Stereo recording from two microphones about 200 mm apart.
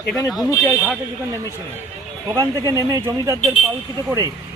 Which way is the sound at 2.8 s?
15° right (ahead or behind).